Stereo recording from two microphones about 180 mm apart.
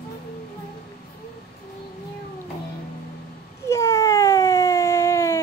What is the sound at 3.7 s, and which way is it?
Cat, 15° left (ahead or behind).